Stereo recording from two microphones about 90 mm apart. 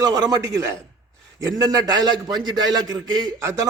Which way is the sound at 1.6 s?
45° right (ahead or behind).